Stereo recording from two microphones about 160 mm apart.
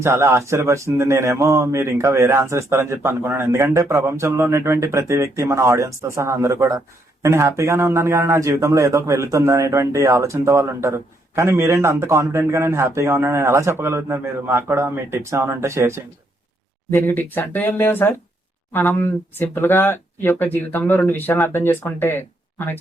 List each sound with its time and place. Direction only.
0.0 s speech: 15° right (ahead or behind)
16.9 s speech: 15° left (ahead or behind)